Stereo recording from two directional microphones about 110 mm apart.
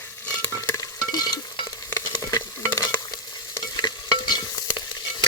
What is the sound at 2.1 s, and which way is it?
Stir, 35° left (ahead or behind).